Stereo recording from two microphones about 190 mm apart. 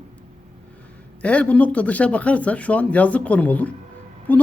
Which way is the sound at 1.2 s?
5° left (ahead or behind).